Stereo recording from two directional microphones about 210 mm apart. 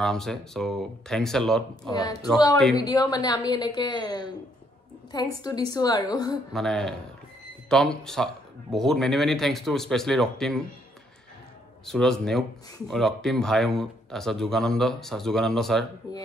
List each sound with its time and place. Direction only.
0.0 s speech: centre (ahead or behind)
1.9 s a woman's voice: 15° left (ahead or behind)
6.5 s speech: centre (ahead or behind)
11.8 s speech: centre (ahead or behind)